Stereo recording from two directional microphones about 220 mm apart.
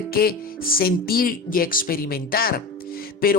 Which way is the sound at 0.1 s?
45° left (ahead or behind).